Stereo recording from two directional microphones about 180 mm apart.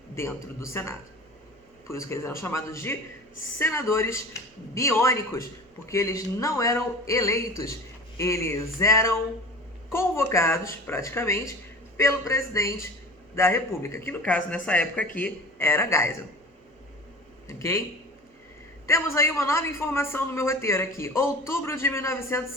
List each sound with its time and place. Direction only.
0.2 s speech: 15° left (ahead or behind)
17.5 s speech: 15° left (ahead or behind)
18.9 s speech: 15° left (ahead or behind)